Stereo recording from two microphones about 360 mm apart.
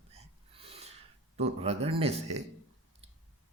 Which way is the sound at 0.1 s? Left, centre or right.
Centre.